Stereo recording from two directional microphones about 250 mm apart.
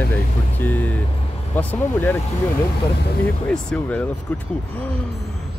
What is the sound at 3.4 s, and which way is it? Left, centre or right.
Speech, centre.